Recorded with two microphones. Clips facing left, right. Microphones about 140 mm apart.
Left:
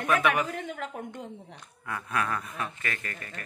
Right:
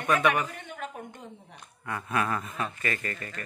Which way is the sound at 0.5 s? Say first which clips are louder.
Left 4 dB; 90° left.